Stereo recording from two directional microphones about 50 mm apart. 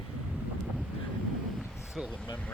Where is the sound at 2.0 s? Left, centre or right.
Centre.